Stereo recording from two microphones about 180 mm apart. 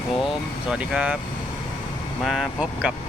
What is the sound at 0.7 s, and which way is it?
Speech, 5° right (ahead or behind).